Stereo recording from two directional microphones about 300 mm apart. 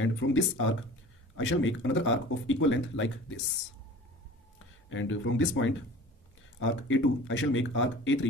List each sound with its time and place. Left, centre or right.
0.0 s speech: left
4.8 s speech: left